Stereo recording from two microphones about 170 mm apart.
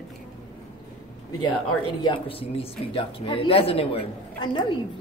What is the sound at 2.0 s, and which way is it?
Speech, 30° left (ahead or behind).